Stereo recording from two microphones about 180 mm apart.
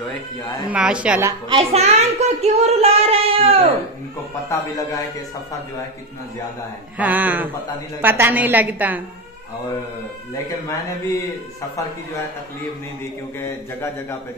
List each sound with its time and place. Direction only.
0.7 s a woman's voice: 5° right (ahead or behind)
1.5 s speech: 35° right (ahead or behind)
4.5 s a man's voice: 20° left (ahead or behind)
7.0 s a woman's voice: 10° right (ahead or behind)